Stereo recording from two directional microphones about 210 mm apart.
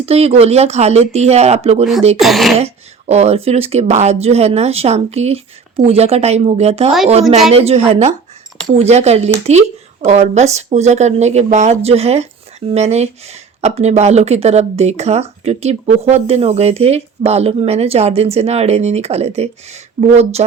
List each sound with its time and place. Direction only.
0.0 s speech: 30° right (ahead or behind)
2.1 s speech: centre (ahead or behind)
2.6 s speech: 30° right (ahead or behind)